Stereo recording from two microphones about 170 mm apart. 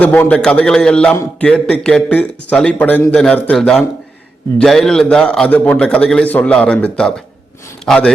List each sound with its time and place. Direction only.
0.0 s a man's voice: 10° left (ahead or behind)